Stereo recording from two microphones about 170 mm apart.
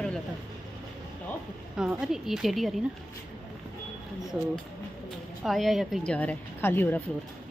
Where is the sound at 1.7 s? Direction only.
5° right (ahead or behind).